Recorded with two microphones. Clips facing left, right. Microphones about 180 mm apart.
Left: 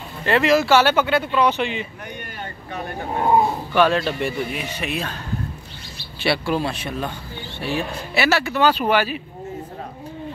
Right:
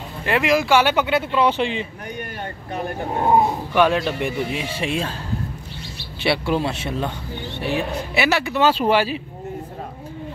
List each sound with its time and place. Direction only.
0.2 s speech: 10° right (ahead or behind); by 1.9 s 30° right (ahead or behind)
3.7 s speech: 15° right (ahead or behind)
6.2 s speech: 20° right (ahead or behind)